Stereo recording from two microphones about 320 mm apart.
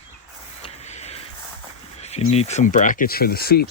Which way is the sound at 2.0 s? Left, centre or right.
Centre.